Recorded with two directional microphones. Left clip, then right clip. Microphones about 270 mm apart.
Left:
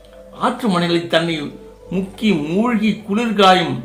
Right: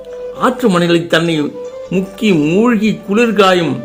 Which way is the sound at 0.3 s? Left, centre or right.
Right.